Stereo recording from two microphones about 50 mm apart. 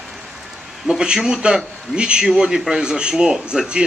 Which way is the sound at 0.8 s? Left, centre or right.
Centre.